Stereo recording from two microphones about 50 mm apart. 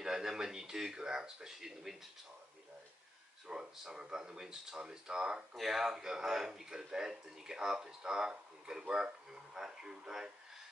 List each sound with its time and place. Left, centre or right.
0.0 s speech: centre
3.4 s speech: centre
5.6 s speech: centre